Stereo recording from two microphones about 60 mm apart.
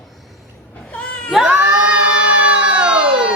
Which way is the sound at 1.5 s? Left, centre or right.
Right.